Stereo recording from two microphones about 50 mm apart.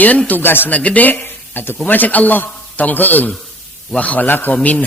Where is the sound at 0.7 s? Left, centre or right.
Left.